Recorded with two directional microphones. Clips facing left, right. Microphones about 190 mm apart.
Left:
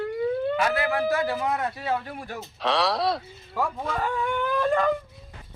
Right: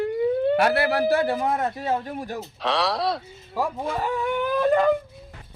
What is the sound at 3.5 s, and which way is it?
Speech, 35° right (ahead or behind).